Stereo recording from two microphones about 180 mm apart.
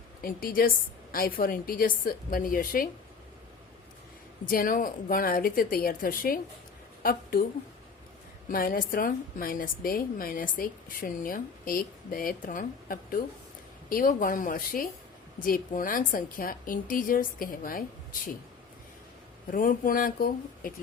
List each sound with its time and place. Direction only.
0.2 s a woman's voice: 55° left (ahead or behind)
4.4 s a woman's voice: 50° left (ahead or behind)
8.4 s a woman's voice: 50° left (ahead or behind)
19.5 s a woman's voice: 50° left (ahead or behind)